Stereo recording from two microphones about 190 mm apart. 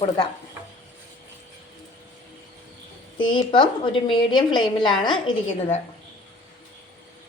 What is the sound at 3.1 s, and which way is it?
A woman's voice, 25° left (ahead or behind).